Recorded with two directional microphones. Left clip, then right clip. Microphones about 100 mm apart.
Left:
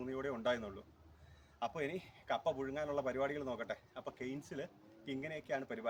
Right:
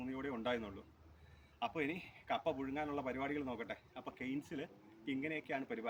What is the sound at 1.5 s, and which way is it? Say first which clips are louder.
Speech: even; 50° left (ahead or behind).